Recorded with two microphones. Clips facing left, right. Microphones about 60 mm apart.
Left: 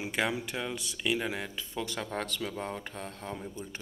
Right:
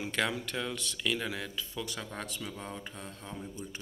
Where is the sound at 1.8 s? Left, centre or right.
Left.